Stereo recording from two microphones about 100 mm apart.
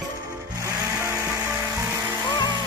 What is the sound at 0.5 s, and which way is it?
Music, 30° right (ahead or behind).